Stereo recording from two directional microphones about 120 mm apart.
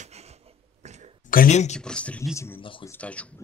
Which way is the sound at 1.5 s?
70° left (ahead or behind).